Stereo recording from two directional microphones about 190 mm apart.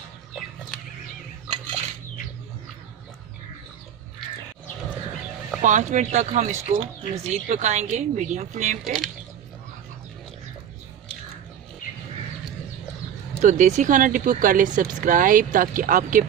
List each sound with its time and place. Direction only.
5.6 s speech: 40° right (ahead or behind)
8.8 s speech: centre (ahead or behind)
11.8 s a sound: 45° left (ahead or behind)
13.4 s speech: 40° right (ahead or behind)